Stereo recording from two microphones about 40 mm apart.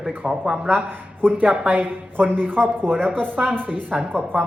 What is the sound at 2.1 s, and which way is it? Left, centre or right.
Speech, right.